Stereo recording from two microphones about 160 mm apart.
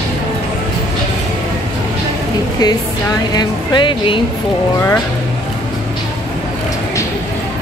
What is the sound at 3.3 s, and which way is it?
Speech, 25° left (ahead or behind).